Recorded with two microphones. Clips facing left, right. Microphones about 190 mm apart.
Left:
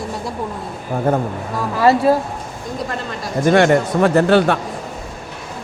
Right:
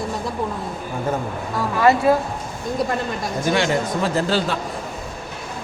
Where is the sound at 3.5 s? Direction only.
60° left (ahead or behind).